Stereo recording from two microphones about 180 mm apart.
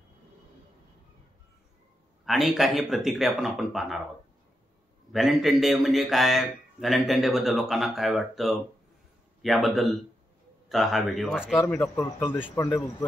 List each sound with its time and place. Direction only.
2.2 s a man's voice: centre (ahead or behind)
5.1 s a man's voice: centre (ahead or behind)
11.6 s speech: 15° left (ahead or behind)